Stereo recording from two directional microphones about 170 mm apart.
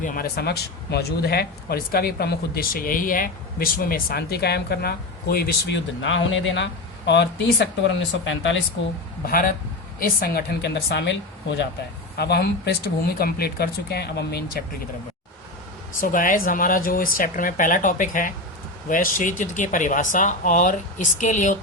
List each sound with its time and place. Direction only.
0.0 s speech: 55° left (ahead or behind); by 8.5 s 90° left
9.2 s a man's voice: 60° left (ahead or behind); by 11.7 s 90° left
12.1 s speech: 70° left (ahead or behind)
16.0 s speech: 50° left (ahead or behind)